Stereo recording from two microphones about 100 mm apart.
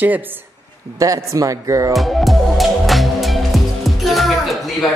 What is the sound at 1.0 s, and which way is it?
Speech, 35° right (ahead or behind).